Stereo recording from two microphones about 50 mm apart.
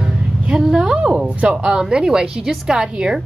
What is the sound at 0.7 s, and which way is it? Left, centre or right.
A woman's voice, centre.